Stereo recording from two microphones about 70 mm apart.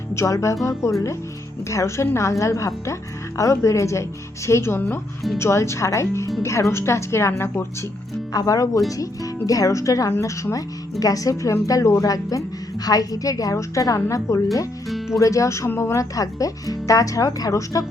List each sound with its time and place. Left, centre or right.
0.1 s speech: left
8.3 s a woman's voice: left
14.8 s music: centre
15.2 s speech: left